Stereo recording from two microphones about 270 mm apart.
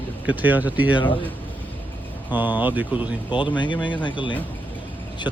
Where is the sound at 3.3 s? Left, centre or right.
Centre.